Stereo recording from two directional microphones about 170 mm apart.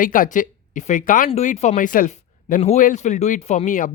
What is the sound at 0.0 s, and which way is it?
Speech, 50° left (ahead or behind).